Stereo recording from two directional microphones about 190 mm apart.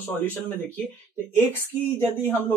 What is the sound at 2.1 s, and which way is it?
Speech, 10° left (ahead or behind).